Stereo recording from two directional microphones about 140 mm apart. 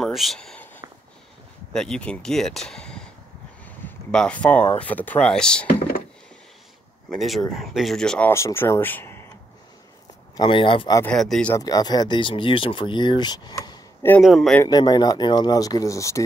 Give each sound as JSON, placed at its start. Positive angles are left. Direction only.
{"t": 0.0, "sound": "a sound", "side_deg": 0}
{"t": 1.7, "sound": "speech", "side_deg": 5}
{"t": 3.6, "sound": "a sound", "side_deg": 10}
{"t": 4.7, "sound": "speech", "side_deg": 10}
{"t": 7.2, "sound": "speech", "side_deg": 0}
{"t": 8.3, "sound": "speech", "side_deg": 20}
{"t": 10.3, "sound": "speech", "side_deg": 35}
{"t": 11.1, "sound": "speech", "side_deg": 5}
{"t": 11.5, "sound": "speech", "side_deg": 25}
{"t": 14.2, "sound": "speech", "side_deg": 0}
{"t": 14.6, "sound": "speech", "side_deg": 30}